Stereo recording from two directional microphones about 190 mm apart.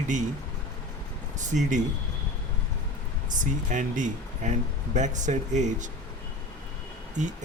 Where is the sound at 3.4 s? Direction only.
40° right (ahead or behind).